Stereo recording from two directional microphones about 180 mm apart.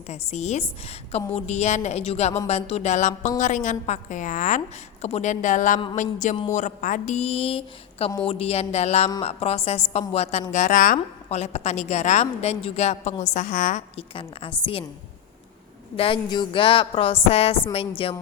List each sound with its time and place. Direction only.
0.1 s a woman's voice: 35° left (ahead or behind)
14.1 s speech: 30° left (ahead or behind)
16.0 s a woman's voice: 30° left (ahead or behind)